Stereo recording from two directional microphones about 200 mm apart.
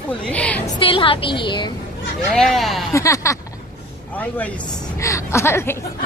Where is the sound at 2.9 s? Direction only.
15° left (ahead or behind).